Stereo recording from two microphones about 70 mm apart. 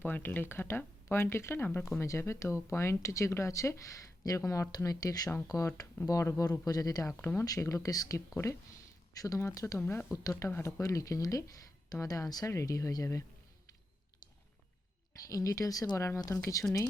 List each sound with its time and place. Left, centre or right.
0.0 s speech: left
9.7 s speech: left
10.4 s speech: left
15.3 s speech: left
16.0 s speech: left